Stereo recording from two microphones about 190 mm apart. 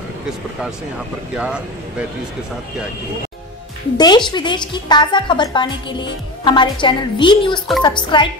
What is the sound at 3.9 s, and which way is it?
A woman's voice, 20° left (ahead or behind).